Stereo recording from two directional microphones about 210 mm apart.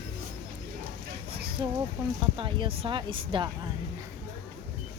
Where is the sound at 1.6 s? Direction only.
20° right (ahead or behind).